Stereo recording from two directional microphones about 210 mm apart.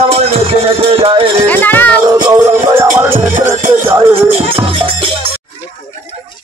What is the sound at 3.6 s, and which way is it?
Speech, 40° right (ahead or behind).